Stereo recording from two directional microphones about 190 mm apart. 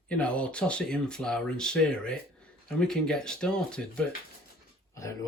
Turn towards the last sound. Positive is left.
turn(degrees=15)  # may be behind; listen again after turning